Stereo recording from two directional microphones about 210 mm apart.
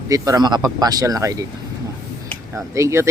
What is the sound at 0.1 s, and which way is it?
Speech, 15° right (ahead or behind).